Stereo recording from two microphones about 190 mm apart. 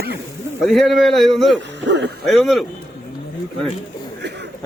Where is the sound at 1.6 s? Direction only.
65° right (ahead or behind).